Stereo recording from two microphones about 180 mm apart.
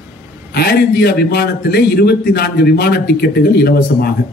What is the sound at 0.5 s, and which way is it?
A man's voice, 60° left (ahead or behind).